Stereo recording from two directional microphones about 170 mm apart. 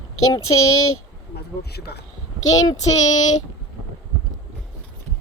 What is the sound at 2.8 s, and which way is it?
Child singing, 40° left (ahead or behind).